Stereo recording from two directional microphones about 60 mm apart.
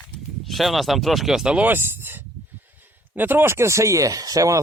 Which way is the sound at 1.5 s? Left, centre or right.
Right.